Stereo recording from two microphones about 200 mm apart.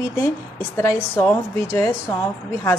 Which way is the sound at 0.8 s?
15° left (ahead or behind).